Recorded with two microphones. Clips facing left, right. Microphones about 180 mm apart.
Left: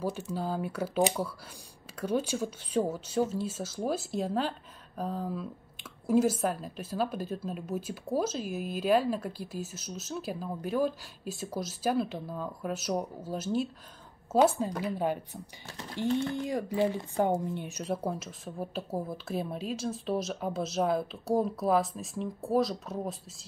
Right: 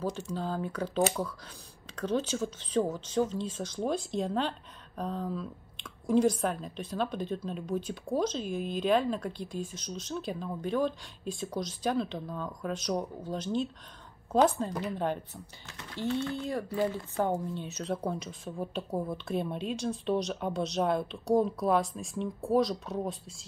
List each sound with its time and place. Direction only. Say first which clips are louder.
0.3 s speech: left 1 dB; 10° left (ahead or behind)
15.6 s speech: left 5 dB; 35° left (ahead or behind)
16.0 s speech: left 2 dB; 15° left (ahead or behind)